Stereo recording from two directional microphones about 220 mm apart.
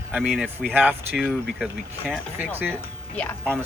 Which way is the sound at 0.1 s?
5° right (ahead or behind).